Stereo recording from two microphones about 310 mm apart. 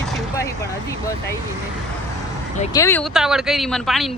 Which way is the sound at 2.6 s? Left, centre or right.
Centre.